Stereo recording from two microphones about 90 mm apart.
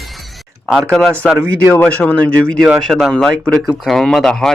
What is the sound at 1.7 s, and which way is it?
Speech, 15° left (ahead or behind).